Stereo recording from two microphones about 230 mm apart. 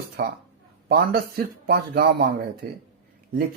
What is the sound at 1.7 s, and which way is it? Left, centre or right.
Speech, right.